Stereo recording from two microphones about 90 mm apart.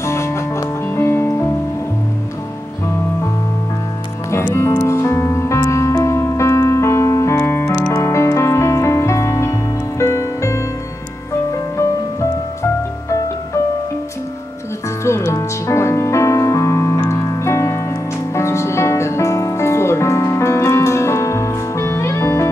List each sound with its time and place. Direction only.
0.0 s music: 30° left (ahead or behind)
4.6 s music: 30° left (ahead or behind)
15.0 s music: 30° left (ahead or behind)